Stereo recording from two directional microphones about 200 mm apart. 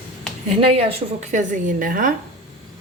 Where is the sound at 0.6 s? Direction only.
30° right (ahead or behind); by 2.1 s 45° right (ahead or behind).